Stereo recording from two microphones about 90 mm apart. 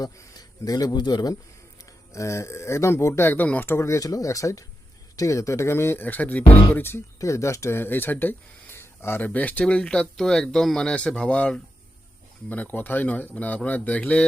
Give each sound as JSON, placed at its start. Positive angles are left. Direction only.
{"t": 0.0, "sound": "a man's voice", "side_deg": 40}
{"t": 2.1, "sound": "speech", "side_deg": 35}